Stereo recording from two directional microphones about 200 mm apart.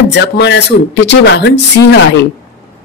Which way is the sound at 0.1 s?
60° left (ahead or behind).